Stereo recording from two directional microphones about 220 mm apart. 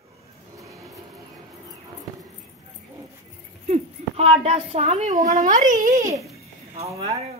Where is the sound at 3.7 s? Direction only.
30° right (ahead or behind).